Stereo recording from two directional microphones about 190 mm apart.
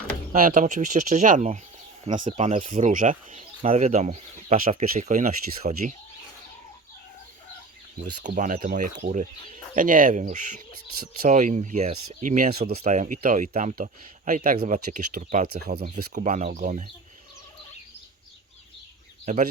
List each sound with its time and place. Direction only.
0.3 s speech: 45° right (ahead or behind)
8.2 s speech: 40° right (ahead or behind)
15.6 s speech: 55° right (ahead or behind)
16.1 s speech: 40° right (ahead or behind)
19.2 s speech: 40° right (ahead or behind)